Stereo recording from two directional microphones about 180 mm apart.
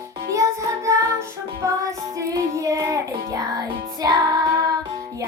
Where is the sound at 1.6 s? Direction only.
20° right (ahead or behind).